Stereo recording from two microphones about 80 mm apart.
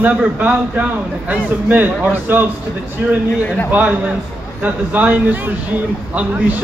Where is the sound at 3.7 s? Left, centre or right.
Right.